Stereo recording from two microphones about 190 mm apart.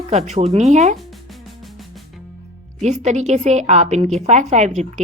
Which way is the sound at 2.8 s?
35° right (ahead or behind).